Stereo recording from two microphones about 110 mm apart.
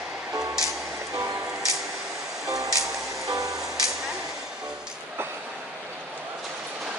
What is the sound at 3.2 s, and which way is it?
Music, 30° right (ahead or behind).